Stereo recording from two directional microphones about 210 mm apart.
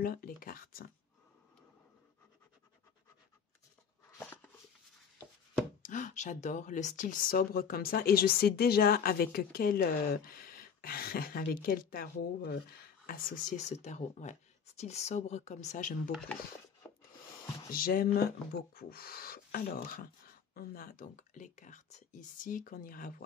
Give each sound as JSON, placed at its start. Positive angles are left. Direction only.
{"t": 0.0, "sound": "speech", "side_deg": 45}
{"t": 4.2, "sound": "a sound", "side_deg": 10}
{"t": 5.8, "sound": "speech", "side_deg": 35}
{"t": 16.1, "sound": "speech", "side_deg": 5}
{"t": 16.8, "sound": "a sound", "side_deg": 15}
{"t": 17.6, "sound": "speech", "side_deg": 45}